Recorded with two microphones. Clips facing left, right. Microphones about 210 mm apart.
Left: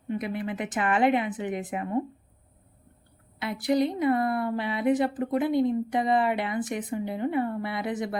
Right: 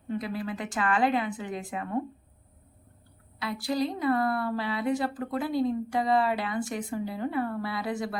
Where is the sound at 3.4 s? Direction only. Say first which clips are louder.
Left 4 dB; 20° left (ahead or behind).